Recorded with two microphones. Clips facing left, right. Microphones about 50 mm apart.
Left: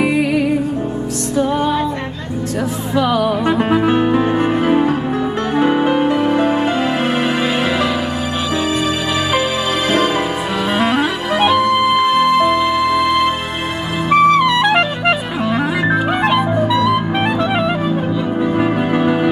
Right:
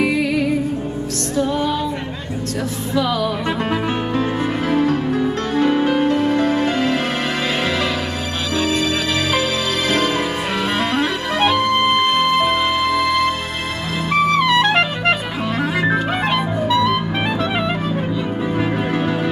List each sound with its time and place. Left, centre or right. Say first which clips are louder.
0.1 s music: left 3 dB; left
2.9 s music: left 4 dB; left
10.8 s music: left 3 dB; centre
14.1 s clarinet: left 4 dB; centre
16.6 s music: left 2 dB; left
17.4 s music: left 4 dB; centre
18.6 s music: left 4 dB; centre